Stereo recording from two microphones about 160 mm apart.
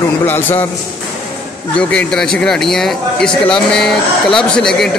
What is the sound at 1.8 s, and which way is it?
Speech, 5° left (ahead or behind).